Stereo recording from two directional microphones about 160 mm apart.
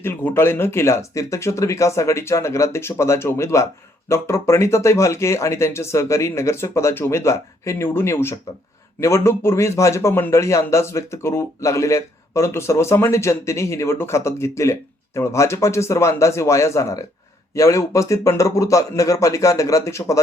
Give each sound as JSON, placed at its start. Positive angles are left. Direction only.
{"t": 0.0, "sound": "a man's voice", "side_deg": 15}